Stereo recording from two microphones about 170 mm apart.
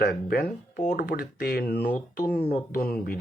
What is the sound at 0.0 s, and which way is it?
Speech, 65° left (ahead or behind).